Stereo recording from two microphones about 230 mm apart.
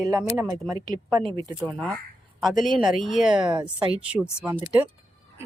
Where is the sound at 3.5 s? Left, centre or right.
Centre.